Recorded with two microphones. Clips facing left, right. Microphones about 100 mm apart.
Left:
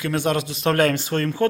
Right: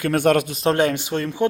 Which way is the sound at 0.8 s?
15° right (ahead or behind).